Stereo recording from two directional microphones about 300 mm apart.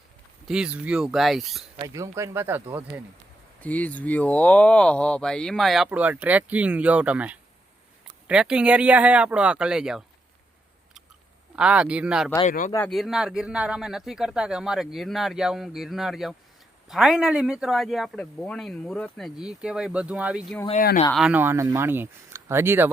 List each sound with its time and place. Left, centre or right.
0.4 s speech: centre
1.7 s speech: centre
3.6 s speech: centre
11.5 s speech: centre
12.5 s speech: left
12.7 s speech: centre
20.7 s speech: left
21.1 s speech: centre